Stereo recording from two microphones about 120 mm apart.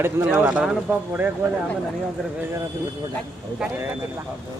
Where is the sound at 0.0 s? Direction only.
20° right (ahead or behind).